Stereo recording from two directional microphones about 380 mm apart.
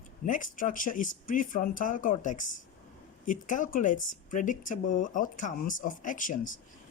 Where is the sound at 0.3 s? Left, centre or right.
Left.